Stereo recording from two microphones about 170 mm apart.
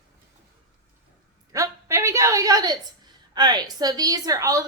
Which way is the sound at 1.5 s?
15° right (ahead or behind).